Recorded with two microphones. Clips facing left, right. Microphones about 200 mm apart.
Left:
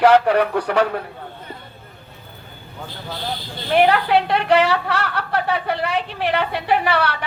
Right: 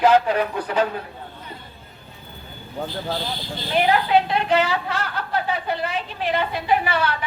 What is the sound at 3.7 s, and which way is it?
A woman's voice, 65° left (ahead or behind).